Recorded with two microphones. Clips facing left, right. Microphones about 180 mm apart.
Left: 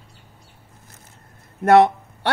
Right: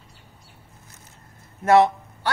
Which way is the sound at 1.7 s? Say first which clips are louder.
Left 3 dB; 60° left (ahead or behind).